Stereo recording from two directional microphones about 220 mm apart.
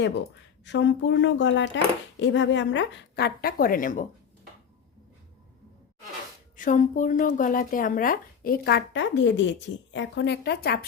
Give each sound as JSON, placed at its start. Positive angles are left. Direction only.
{"t": 0.6, "sound": "speech", "side_deg": 55}
{"t": 6.6, "sound": "speech", "side_deg": 35}